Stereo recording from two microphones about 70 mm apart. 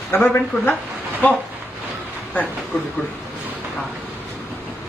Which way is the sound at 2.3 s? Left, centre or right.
Left.